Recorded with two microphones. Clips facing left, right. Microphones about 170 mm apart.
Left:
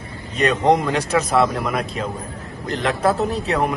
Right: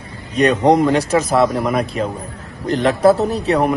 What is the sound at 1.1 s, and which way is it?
Speech, 35° right (ahead or behind).